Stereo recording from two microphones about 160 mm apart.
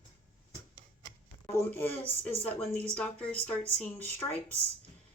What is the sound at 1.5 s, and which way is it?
Speech, 15° left (ahead or behind).